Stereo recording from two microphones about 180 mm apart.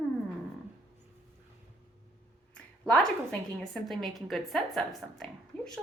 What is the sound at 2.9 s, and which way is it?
Speech, 5° left (ahead or behind).